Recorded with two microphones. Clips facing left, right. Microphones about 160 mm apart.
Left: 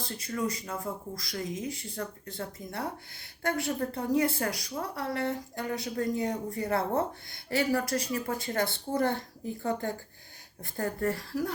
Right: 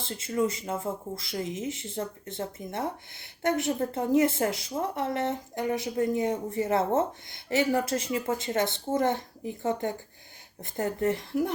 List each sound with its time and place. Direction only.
0.0 s a woman's voice: 25° right (ahead or behind)